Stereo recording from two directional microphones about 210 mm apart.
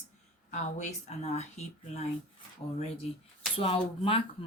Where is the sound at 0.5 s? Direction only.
35° left (ahead or behind).